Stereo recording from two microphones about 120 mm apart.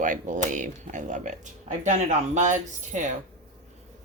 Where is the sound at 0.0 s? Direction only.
90° right.